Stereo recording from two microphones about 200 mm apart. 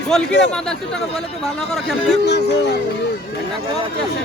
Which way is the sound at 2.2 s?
55° left (ahead or behind).